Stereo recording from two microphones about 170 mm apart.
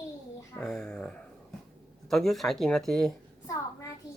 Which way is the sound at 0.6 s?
5° left (ahead or behind).